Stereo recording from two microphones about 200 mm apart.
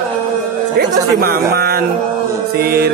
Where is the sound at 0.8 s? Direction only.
50° right (ahead or behind).